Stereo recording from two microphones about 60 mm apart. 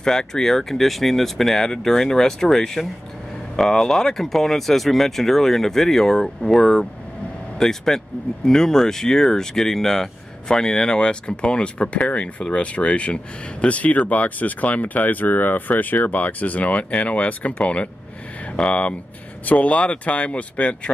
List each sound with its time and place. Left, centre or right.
0.0 s speech: centre